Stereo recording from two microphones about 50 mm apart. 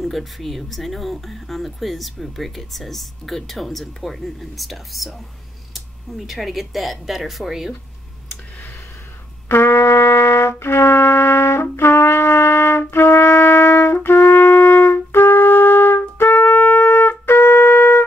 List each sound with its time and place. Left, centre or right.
0.0 s speech: centre
6.1 s speech: centre
9.5 s trumpet: left